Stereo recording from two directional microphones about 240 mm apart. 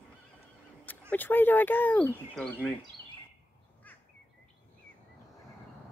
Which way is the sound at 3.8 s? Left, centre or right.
Centre.